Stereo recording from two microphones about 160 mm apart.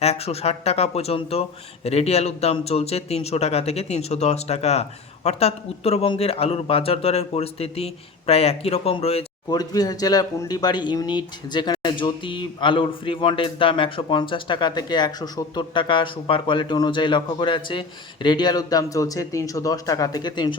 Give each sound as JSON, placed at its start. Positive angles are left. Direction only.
{"t": 0.0, "sound": "speech", "side_deg": 40}
{"t": 9.5, "sound": "speech", "side_deg": 25}